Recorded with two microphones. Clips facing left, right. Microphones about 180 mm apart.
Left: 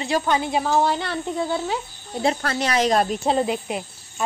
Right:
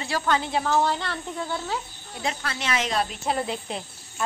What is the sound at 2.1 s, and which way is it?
Speech, 40° left (ahead or behind).